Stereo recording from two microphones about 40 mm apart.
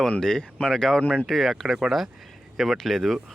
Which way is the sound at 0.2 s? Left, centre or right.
Centre.